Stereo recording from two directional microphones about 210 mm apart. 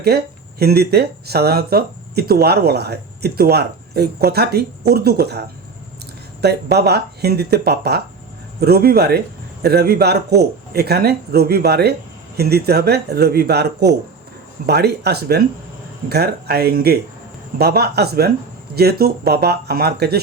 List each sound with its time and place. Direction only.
0.1 s speech: 50° right (ahead or behind)